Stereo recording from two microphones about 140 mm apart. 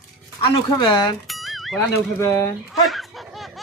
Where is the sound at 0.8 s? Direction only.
35° left (ahead or behind).